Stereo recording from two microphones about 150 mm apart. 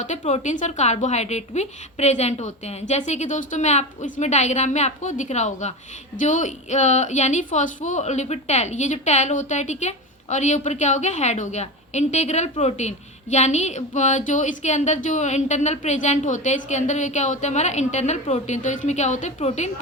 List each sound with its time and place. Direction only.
0.0 s a woman's voice: 50° left (ahead or behind)